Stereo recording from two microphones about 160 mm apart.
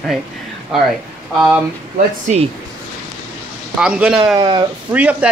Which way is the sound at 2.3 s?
50° right (ahead or behind).